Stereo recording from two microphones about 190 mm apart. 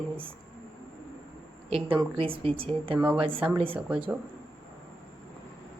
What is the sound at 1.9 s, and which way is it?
Speech, 30° right (ahead or behind).